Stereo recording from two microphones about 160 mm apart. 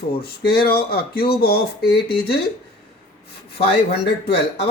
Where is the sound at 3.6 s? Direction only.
90° left.